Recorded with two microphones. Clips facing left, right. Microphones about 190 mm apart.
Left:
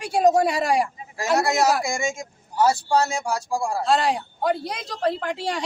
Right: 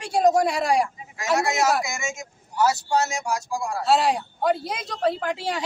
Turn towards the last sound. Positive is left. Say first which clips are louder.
# even
turn(degrees=0)  # may be behind; listen again after turning